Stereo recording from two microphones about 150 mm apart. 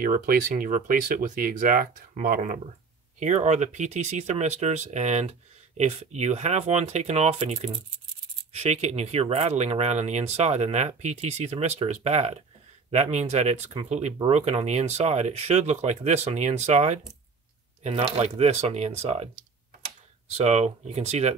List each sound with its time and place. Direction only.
0.0 s speech: 70° right (ahead or behind)
3.2 s speech: 50° right (ahead or behind)
20.3 s speech: 45° right (ahead or behind)